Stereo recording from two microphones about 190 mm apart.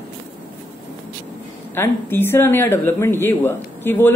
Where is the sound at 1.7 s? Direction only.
10° left (ahead or behind).